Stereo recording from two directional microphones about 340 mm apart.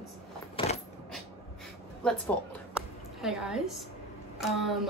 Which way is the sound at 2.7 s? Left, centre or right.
Centre.